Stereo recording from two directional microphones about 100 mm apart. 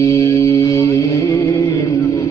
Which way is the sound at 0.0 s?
35° left (ahead or behind).